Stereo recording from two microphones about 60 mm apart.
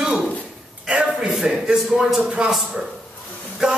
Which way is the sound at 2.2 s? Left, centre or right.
Centre.